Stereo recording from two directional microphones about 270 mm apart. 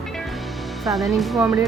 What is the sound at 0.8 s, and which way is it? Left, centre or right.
Speech, centre.